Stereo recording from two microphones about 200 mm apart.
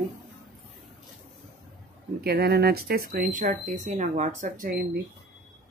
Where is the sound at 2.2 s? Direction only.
50° right (ahead or behind).